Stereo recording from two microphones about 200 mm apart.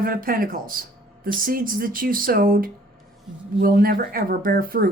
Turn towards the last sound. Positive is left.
turn(degrees=-45)  # may be behind; listen again after turning